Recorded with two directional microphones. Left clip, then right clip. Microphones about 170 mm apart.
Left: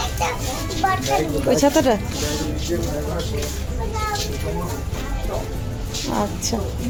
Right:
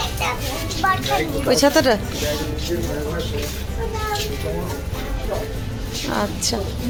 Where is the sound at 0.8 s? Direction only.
30° left (ahead or behind).